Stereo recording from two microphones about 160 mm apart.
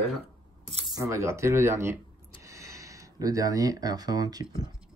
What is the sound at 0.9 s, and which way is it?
Speech, 20° right (ahead or behind).